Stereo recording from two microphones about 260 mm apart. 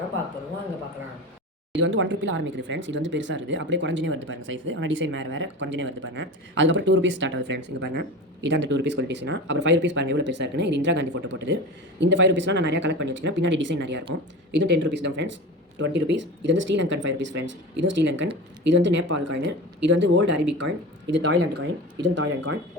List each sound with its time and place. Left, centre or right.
1.8 s speech: right
21.5 s speech: right